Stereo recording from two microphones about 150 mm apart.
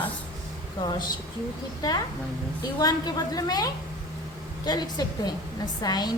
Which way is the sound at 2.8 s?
25° left (ahead or behind).